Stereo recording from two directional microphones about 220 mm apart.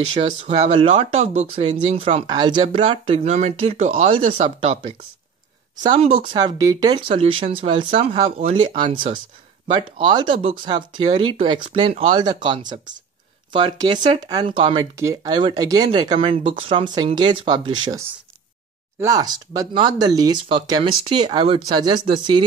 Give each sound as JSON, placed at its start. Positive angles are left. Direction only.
{"t": 0.1, "sound": "speech", "side_deg": -25}